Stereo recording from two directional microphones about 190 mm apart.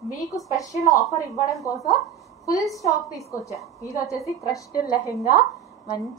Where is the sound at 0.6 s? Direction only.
15° left (ahead or behind).